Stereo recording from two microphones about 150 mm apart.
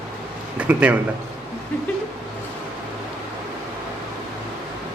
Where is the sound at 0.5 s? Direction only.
10° right (ahead or behind).